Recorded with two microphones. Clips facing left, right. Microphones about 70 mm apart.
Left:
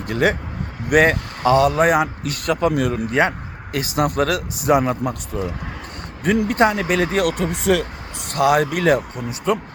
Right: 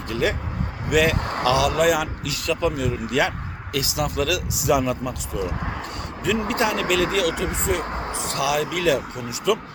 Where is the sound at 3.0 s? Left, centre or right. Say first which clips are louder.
Left 3 dB; left.